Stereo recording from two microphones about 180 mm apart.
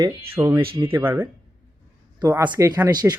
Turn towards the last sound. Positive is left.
turn(degrees=-20)  # may be behind; listen again after turning